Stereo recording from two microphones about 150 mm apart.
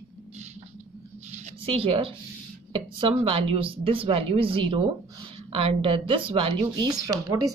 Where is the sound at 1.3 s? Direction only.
40° right (ahead or behind).